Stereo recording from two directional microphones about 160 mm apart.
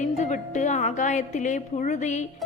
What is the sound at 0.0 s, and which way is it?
Music, 45° left (ahead or behind).